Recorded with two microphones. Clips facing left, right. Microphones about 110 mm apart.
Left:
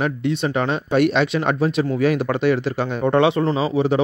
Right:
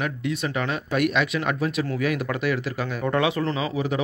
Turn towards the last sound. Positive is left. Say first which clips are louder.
# left 7 dB
turn(degrees=30)  # may be behind; listen again after turning